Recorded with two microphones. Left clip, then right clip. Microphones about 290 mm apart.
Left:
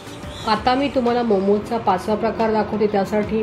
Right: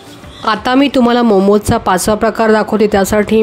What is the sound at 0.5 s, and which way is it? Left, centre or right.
Speech, right.